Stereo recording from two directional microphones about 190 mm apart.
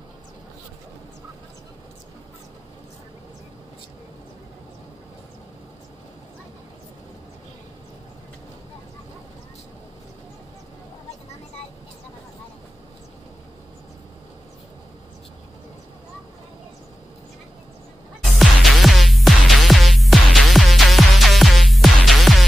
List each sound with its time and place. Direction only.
18.2 s music: centre (ahead or behind)